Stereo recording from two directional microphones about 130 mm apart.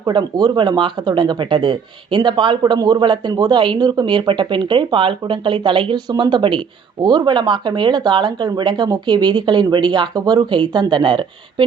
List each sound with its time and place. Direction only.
0.0 s speech: 35° right (ahead or behind)